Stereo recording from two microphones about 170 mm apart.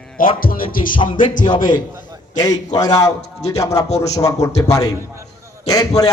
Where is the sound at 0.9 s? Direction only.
30° left (ahead or behind).